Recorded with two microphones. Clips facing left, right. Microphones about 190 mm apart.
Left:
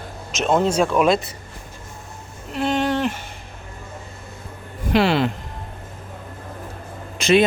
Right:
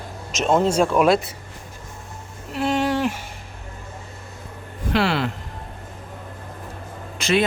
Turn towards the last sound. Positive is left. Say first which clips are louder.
# left 4 dB
turn(degrees=20)  # may be behind; listen again after turning